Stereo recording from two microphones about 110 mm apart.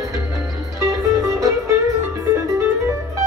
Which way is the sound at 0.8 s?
30° right (ahead or behind).